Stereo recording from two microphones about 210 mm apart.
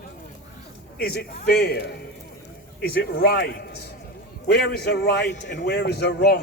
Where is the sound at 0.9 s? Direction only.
45° left (ahead or behind).